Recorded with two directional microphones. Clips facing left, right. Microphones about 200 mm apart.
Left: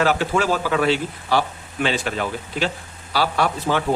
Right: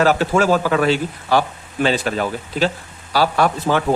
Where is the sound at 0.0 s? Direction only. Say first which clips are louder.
Right 4 dB; 40° right (ahead or behind).